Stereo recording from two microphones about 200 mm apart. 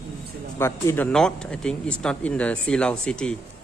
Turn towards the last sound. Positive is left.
turn(degrees=5)  # may be behind; listen again after turning